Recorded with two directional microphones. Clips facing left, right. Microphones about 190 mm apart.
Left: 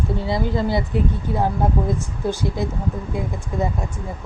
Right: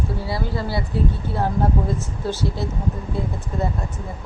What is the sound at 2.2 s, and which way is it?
Speech, 15° left (ahead or behind).